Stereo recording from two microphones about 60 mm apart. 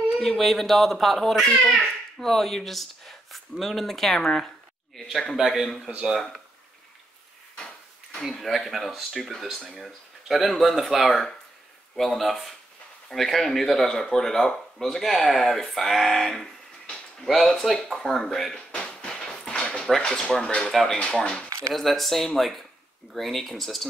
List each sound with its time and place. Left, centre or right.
0.2 s a child's voice: centre
7.5 s speech: centre
18.7 s a sound: centre
20.0 s speech: centre